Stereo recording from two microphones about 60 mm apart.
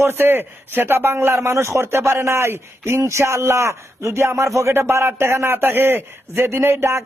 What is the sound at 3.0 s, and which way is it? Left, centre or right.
A man's voice, right.